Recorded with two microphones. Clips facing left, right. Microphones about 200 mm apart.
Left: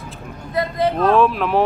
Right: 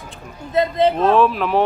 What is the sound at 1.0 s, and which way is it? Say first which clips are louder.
Speech: even; centre (ahead or behind).